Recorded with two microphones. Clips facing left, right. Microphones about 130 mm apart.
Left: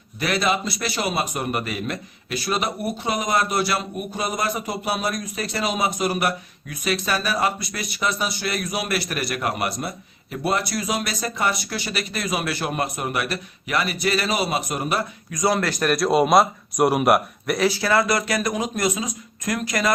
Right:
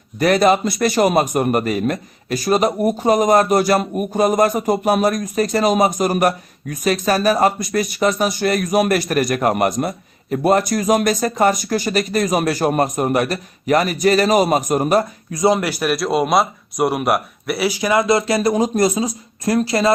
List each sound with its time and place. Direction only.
0.2 s a man's voice: 45° right (ahead or behind)
15.3 s a man's voice: 25° right (ahead or behind); by 17.7 s centre (ahead or behind)
17.7 s speech: 15° right (ahead or behind)